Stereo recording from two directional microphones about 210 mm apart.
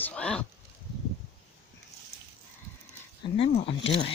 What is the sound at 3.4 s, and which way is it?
Speech, 25° left (ahead or behind).